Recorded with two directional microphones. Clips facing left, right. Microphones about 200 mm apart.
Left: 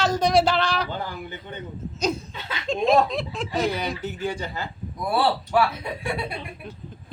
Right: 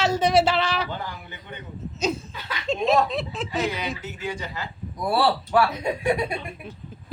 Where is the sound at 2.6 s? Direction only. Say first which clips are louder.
Left 1 dB; centre (ahead or behind).